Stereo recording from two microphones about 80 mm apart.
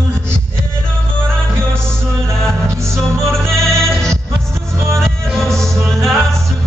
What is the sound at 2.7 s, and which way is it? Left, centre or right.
Music, right.